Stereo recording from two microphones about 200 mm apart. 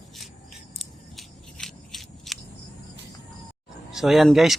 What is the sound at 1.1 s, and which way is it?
Scissors, centre (ahead or behind).